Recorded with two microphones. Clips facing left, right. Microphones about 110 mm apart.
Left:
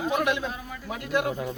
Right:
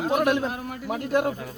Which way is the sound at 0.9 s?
40° right (ahead or behind).